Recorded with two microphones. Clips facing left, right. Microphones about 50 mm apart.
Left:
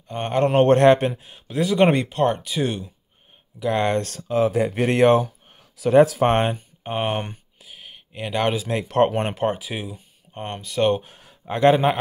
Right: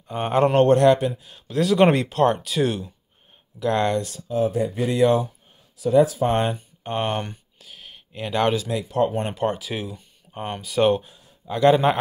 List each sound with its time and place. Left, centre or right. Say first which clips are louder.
0.1 s speech: right 1 dB; centre
0.7 s a man's voice: left 1 dB; left
1.5 s speech: right 1 dB; centre
3.5 s speech: even; centre
4.0 s speech: left 2 dB; left
5.6 s speech: left 2 dB; left
6.3 s a man's voice: left 2 dB; left
6.8 s speech: even; centre
7.6 s a sound: left 1 dB; centre
8.8 s speech: left 6 dB; left
9.4 s speech: left 1 dB; centre
10.3 s speech: right 2 dB; centre
11.4 s a man's voice: left 1 dB; left